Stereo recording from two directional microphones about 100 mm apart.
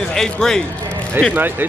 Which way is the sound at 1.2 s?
20° right (ahead or behind).